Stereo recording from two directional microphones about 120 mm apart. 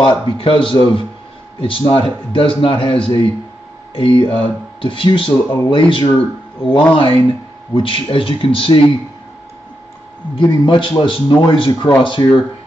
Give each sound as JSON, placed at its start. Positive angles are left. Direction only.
{"t": 0.0, "sound": "speech", "side_deg": 45}
{"t": 10.3, "sound": "speech", "side_deg": 40}